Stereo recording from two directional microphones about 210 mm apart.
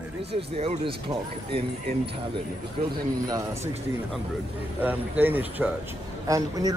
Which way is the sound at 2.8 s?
35° right (ahead or behind).